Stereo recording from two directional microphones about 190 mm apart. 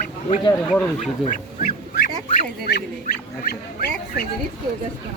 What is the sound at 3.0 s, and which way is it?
Speech, 50° left (ahead or behind).